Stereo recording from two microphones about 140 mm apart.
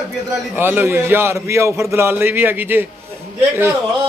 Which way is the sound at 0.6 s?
15° right (ahead or behind).